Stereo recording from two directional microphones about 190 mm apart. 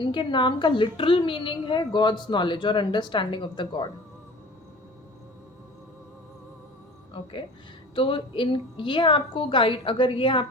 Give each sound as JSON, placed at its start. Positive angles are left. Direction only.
{"t": 0.0, "sound": "a woman's voice", "side_deg": 25}
{"t": 7.2, "sound": "a woman's voice", "side_deg": 30}